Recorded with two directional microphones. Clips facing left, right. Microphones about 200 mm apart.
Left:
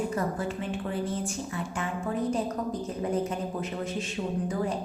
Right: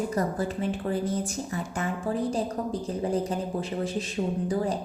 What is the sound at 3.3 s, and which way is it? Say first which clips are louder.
Speech: right 2 dB; 35° right (ahead or behind).